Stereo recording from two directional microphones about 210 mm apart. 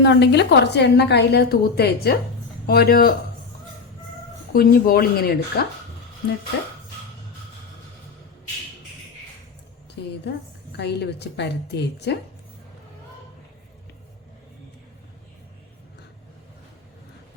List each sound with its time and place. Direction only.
0.0 s a woman's voice: 55° left (ahead or behind)
4.5 s a woman's voice: 45° left (ahead or behind)
10.2 s a woman's voice: 55° left (ahead or behind)